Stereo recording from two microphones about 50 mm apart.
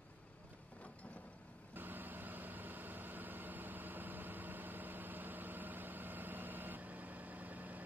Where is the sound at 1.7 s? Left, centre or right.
Right.